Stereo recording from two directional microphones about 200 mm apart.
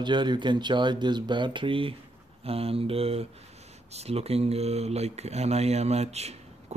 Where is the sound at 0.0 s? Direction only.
20° right (ahead or behind).